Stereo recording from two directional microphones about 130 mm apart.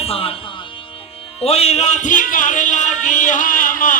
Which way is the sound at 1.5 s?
50° left (ahead or behind).